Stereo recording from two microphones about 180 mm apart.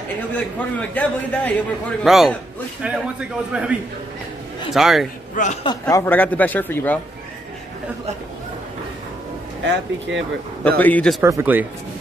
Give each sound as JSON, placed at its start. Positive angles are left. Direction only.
{"t": 0.3, "sound": "a man's voice", "side_deg": 10}
{"t": 4.7, "sound": "a man's voice", "side_deg": 0}
{"t": 5.3, "sound": "a man's voice", "side_deg": 45}
{"t": 5.6, "sound": "speech", "side_deg": 20}
{"t": 9.7, "sound": "speech", "side_deg": -90}
{"t": 10.8, "sound": "speech", "side_deg": 5}
{"t": 11.2, "sound": "a man's voice", "side_deg": -15}